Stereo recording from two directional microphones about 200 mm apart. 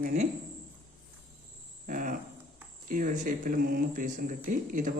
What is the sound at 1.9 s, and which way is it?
Cricket, 40° right (ahead or behind).